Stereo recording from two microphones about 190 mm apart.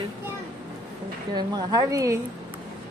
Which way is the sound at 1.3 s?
20° right (ahead or behind).